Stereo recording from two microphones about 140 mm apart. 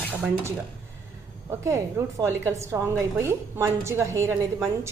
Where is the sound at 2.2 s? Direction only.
20° right (ahead or behind).